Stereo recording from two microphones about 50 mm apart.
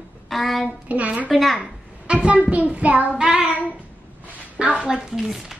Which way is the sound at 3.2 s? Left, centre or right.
Centre.